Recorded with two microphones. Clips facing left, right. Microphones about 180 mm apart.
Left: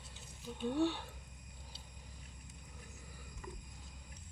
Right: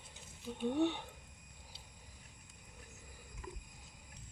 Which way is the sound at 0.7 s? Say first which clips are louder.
Right 1 dB; 20° right (ahead or behind).